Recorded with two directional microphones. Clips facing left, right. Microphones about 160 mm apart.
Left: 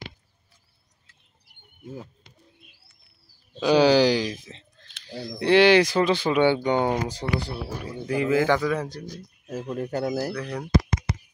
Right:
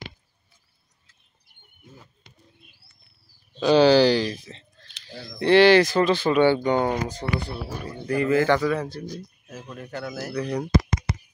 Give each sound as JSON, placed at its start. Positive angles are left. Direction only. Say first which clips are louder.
{"t": 3.5, "sound": "speech", "louder": "right 2 dB", "side_deg": 10}
{"t": 5.4, "sound": "a man's voice", "louder": "right 2 dB", "side_deg": 10}
{"t": 9.5, "sound": "speech", "louder": "left 8 dB", "side_deg": 35}
{"t": 10.4, "sound": "speech", "louder": "right 5 dB", "side_deg": -10}